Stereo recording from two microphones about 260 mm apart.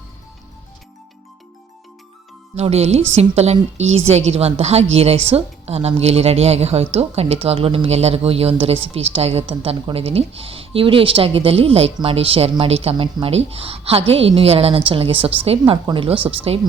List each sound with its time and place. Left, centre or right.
2.6 s a woman's voice: right